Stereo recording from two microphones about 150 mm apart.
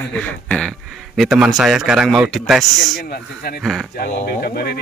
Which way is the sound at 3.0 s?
90° left.